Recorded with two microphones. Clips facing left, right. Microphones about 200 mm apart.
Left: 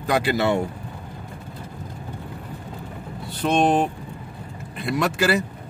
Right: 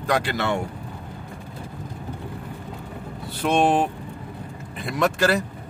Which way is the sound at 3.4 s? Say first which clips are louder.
Even; 5° right (ahead or behind).